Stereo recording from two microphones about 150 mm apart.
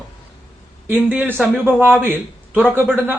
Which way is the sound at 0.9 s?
10° right (ahead or behind).